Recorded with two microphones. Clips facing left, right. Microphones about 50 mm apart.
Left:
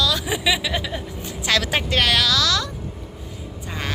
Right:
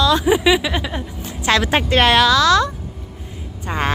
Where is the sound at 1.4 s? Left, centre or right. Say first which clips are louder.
Right 5 dB; right.